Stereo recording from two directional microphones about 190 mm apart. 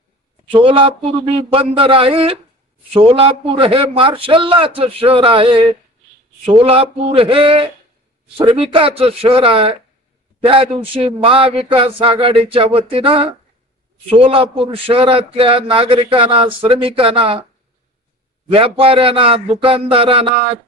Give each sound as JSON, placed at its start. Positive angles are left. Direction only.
{"t": 0.5, "sound": "a man's voice", "side_deg": -25}
{"t": 18.5, "sound": "a man's voice", "side_deg": -30}